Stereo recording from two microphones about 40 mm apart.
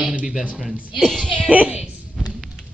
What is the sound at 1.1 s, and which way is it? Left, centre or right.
Speech, centre.